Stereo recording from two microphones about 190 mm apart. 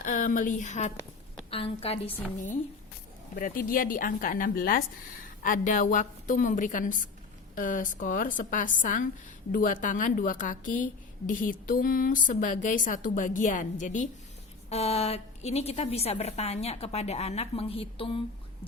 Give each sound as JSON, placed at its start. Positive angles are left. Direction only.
{"t": 0.0, "sound": "a woman's voice", "side_deg": 45}
{"t": 3.3, "sound": "a woman's voice", "side_deg": 50}